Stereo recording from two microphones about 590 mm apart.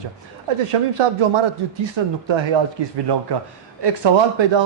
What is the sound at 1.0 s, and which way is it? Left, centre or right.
A man's voice, right.